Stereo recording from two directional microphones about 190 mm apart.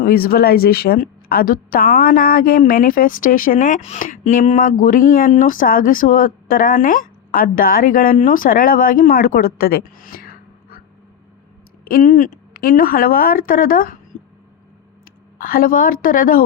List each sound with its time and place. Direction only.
0.0 s a woman's voice: 50° left (ahead or behind)
11.9 s a woman's voice: 45° left (ahead or behind)
15.4 s a woman's voice: 50° left (ahead or behind)